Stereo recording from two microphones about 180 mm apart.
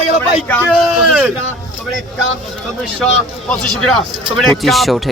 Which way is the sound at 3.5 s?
5° left (ahead or behind).